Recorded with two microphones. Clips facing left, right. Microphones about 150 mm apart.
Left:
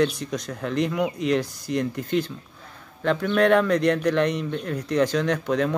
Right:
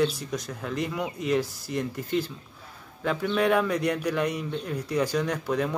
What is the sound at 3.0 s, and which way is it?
Speech, 5° right (ahead or behind).